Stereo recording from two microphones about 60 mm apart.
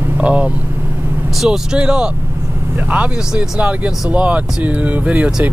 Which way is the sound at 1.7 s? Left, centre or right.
Centre.